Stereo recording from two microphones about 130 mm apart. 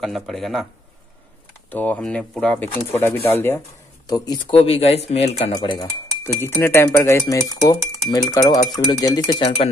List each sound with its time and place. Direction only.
0.0 s speech: centre (ahead or behind)
1.7 s speech: 10° left (ahead or behind)
4.5 s speech: 45° left (ahead or behind)
5.6 s speech: 35° left (ahead or behind)
6.4 s speech: 20° left (ahead or behind)
9.4 s speech: 50° left (ahead or behind)